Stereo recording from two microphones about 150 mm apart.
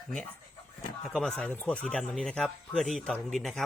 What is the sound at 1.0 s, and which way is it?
Speech, centre (ahead or behind).